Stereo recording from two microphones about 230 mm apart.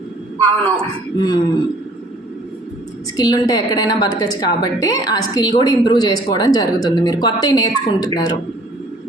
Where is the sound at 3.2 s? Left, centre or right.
Centre.